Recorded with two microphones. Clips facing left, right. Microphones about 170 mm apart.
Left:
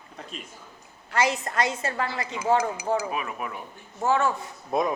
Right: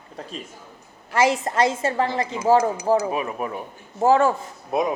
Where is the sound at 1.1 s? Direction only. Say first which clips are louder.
Right 5 dB; 30° right (ahead or behind).